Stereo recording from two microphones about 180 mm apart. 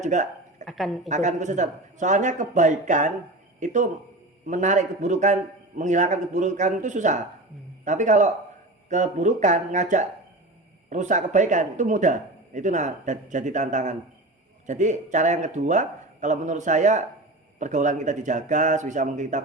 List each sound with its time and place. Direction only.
0.0 s a man's voice: 45° right (ahead or behind)
0.6 s speech: centre (ahead or behind)
1.0 s a man's voice: 40° right (ahead or behind)